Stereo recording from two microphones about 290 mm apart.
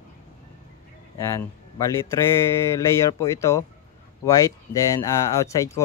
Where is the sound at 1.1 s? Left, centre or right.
Centre.